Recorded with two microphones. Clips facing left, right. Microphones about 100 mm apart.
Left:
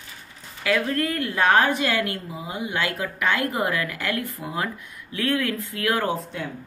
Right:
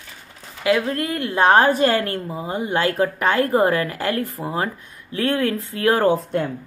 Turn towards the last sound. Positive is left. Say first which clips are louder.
# right 8 dB
turn(degrees=-55)  # may be behind; listen again after turning